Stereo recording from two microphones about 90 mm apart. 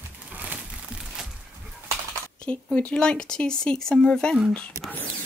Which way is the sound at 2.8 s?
10° left (ahead or behind).